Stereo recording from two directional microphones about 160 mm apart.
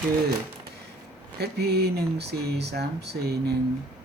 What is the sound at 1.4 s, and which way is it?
Speech, 90° right.